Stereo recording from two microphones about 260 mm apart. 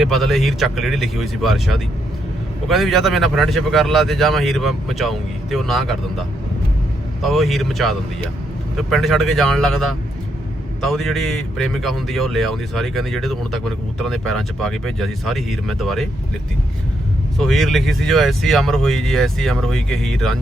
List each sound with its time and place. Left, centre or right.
0.0 s speech: centre
17.3 s speech: centre